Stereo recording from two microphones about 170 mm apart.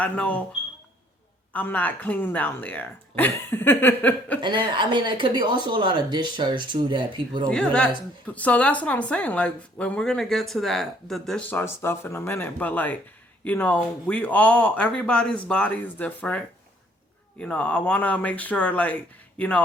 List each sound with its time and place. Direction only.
0.0 s speech: 10° left (ahead or behind)
1.5 s speech: 10° left (ahead or behind)
4.4 s speech: 30° right (ahead or behind)
7.5 s speech: 5° left (ahead or behind)